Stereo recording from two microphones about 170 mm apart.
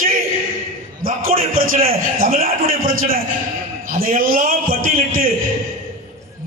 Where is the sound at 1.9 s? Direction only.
55° right (ahead or behind).